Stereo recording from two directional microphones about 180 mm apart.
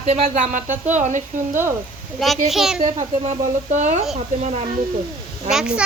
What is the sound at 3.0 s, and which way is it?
Speech, 40° right (ahead or behind).